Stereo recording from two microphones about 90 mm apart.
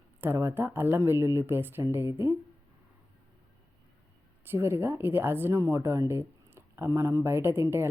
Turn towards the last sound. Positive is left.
turn(degrees=-25)  # may be behind; listen again after turning